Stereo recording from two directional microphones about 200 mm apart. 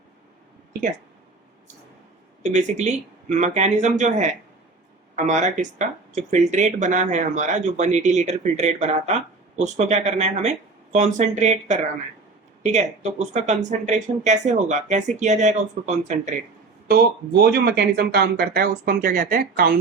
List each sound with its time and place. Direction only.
2.4 s speech: 35° right (ahead or behind)
16.9 s speech: 55° right (ahead or behind)